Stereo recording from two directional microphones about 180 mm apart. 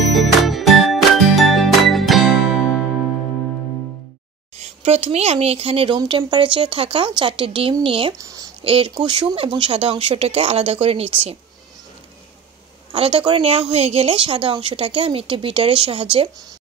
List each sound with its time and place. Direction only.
0.0 s music: centre (ahead or behind)
4.6 s a woman's voice: 35° right (ahead or behind)
8.2 s a sound: 20° right (ahead or behind)
8.6 s speech: 30° right (ahead or behind)
12.9 s a woman's voice: 30° right (ahead or behind)